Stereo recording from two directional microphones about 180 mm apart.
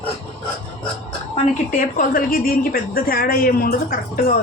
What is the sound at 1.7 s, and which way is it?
A woman's voice, 50° left (ahead or behind).